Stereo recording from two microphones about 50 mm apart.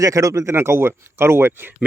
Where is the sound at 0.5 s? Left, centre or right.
Right.